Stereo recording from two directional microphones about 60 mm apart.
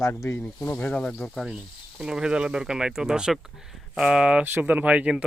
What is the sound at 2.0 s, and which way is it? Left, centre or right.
Speech, centre.